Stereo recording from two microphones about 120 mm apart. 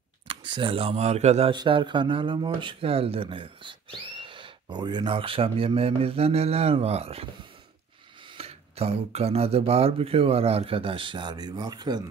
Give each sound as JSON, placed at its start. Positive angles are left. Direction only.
{"t": 0.3, "sound": "speech", "side_deg": -45}
{"t": 1.5, "sound": "speech", "side_deg": -40}
{"t": 8.4, "sound": "speech", "side_deg": -55}